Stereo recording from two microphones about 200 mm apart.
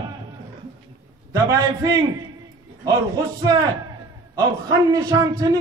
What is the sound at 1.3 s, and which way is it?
A man's voice, 20° right (ahead or behind).